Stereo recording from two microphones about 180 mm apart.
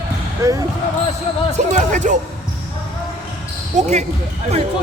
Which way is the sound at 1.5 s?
40° right (ahead or behind).